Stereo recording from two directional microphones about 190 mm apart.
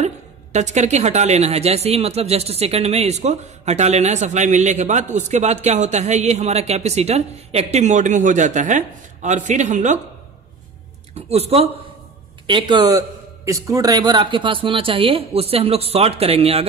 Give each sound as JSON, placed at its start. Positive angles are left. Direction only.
{"t": 0.0, "sound": "a woman's voice", "side_deg": -35}
{"t": 11.1, "sound": "speech", "side_deg": -35}